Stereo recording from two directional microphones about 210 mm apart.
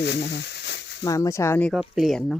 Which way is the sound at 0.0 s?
55° left (ahead or behind).